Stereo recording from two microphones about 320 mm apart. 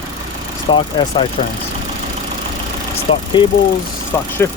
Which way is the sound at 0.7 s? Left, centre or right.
Centre.